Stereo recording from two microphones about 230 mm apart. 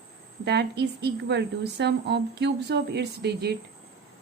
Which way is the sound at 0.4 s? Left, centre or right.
Right.